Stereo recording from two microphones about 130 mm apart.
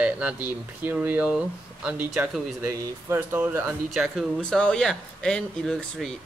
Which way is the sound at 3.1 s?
15° right (ahead or behind).